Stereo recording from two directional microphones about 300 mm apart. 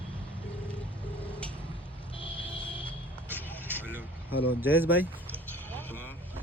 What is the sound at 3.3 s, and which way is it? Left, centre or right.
Vehicle, centre.